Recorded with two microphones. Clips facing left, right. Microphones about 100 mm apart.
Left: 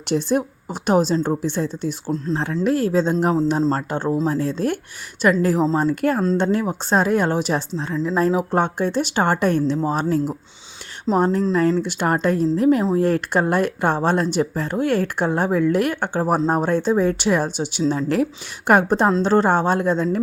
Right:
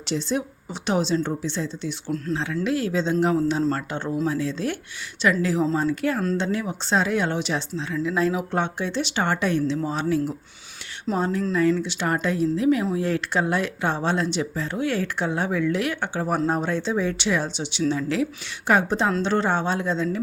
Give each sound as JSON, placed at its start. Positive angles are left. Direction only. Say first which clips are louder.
{"t": 0.1, "sound": "speech", "louder": "left 6 dB", "side_deg": 50}
{"t": 2.0, "sound": "speech", "louder": "left 2 dB", "side_deg": 25}
{"t": 2.3, "sound": "speech", "louder": "left 4 dB", "side_deg": 40}
{"t": 3.6, "sound": "speech", "louder": "left 4 dB", "side_deg": 30}
{"t": 4.3, "sound": "speech", "louder": "left 4 dB", "side_deg": 45}